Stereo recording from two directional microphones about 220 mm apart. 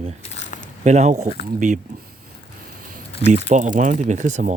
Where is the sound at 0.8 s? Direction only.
30° right (ahead or behind).